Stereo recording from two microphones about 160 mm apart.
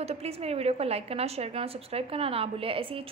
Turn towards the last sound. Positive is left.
turn(degrees=-35)  # may be behind; listen again after turning